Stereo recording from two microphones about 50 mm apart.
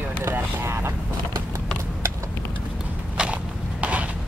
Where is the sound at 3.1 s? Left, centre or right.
Right.